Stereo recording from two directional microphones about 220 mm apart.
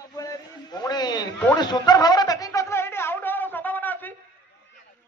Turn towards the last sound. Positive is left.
turn(degrees=10)  # may be behind; listen again after turning